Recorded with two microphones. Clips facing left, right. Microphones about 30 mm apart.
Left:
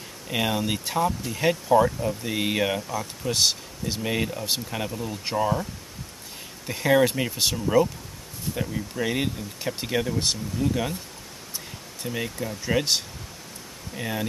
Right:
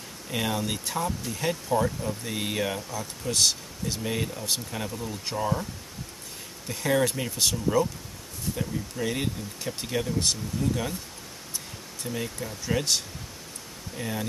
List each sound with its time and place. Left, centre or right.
0.3 s speech: centre
6.7 s speech: centre
12.0 s speech: centre